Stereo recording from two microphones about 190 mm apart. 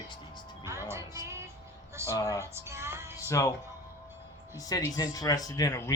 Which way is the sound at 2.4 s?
15° right (ahead or behind).